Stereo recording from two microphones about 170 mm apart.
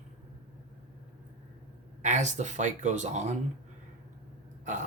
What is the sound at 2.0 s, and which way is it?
Speech, 45° right (ahead or behind).